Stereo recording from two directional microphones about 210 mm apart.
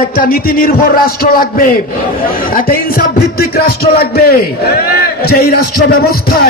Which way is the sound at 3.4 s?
45° left (ahead or behind).